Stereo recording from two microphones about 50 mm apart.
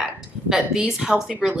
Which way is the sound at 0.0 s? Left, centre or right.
Centre.